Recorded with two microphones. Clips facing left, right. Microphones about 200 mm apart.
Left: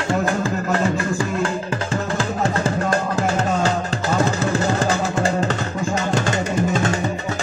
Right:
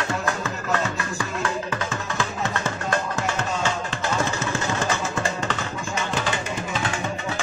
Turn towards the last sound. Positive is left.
turn(degrees=45)  # may be behind; listen again after turning